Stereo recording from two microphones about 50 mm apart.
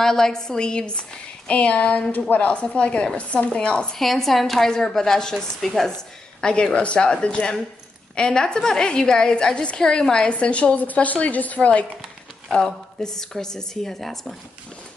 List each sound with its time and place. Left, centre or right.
0.0 s a woman's voice: centre
2.1 s speech: left
2.5 s a woman's voice: left
3.9 s a woman's voice: centre
6.4 s a woman's voice: centre
12.5 s a woman's voice: centre